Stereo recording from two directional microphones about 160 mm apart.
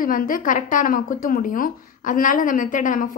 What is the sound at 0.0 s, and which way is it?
A woman's voice, 60° left (ahead or behind).